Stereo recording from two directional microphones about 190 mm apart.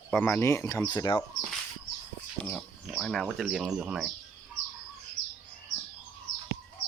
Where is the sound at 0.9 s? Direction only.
25° left (ahead or behind).